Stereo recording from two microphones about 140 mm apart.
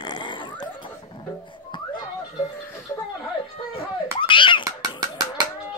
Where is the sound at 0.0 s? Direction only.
35° left (ahead or behind).